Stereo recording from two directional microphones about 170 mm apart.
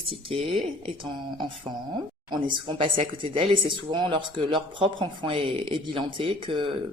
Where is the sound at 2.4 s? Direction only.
30° right (ahead or behind).